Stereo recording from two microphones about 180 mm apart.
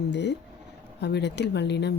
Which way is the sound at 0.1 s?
75° left (ahead or behind).